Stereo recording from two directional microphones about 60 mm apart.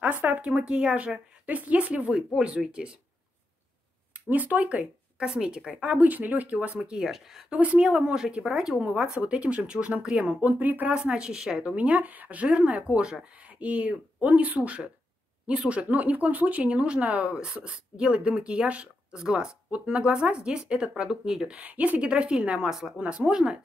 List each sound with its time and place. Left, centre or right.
0.0 s speech: right
4.3 s speech: right
7.1 s speech: centre
7.5 s speech: right
10.5 s speech: right
11.0 s speech: centre
11.7 s speech: right
21.5 s speech: right